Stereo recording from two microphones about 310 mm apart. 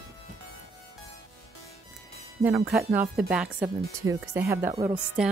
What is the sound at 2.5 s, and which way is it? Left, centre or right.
Speech, centre.